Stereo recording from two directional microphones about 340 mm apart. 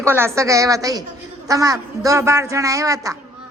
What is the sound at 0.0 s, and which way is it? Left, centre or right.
A woman's voice, centre.